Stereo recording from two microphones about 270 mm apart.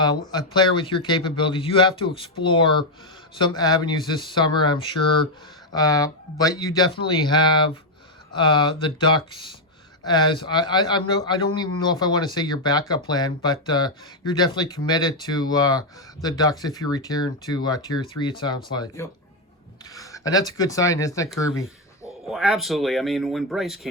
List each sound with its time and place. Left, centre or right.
0.3 s speech: centre
19.8 s a sound: centre
20.5 s speech: centre
22.3 s speech: centre